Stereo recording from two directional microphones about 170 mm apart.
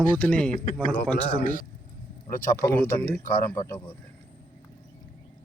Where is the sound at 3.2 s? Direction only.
55° left (ahead or behind).